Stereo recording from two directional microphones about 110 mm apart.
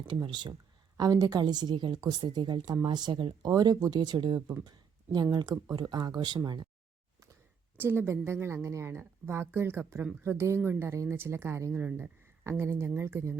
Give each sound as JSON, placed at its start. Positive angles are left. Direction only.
{"t": 0.1, "sound": "a woman's voice", "side_deg": -45}
{"t": 3.4, "sound": "a woman's voice", "side_deg": -35}
{"t": 4.4, "sound": "a woman's voice", "side_deg": -25}
{"t": 5.1, "sound": "a woman's voice", "side_deg": -40}
{"t": 7.8, "sound": "a woman's voice", "side_deg": -20}